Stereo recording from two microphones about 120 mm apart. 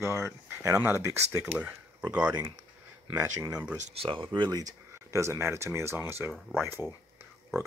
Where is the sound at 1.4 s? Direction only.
10° right (ahead or behind).